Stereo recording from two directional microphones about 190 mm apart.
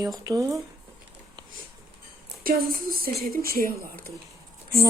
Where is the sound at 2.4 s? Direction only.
50° right (ahead or behind).